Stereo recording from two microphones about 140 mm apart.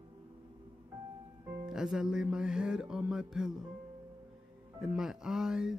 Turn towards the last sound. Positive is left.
turn(degrees=-5)  # may be behind; listen again after turning